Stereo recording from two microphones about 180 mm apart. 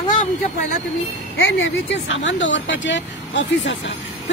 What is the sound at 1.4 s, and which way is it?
Speech, 90° left.